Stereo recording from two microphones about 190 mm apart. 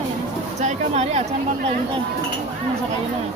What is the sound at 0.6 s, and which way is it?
Speech, 35° right (ahead or behind).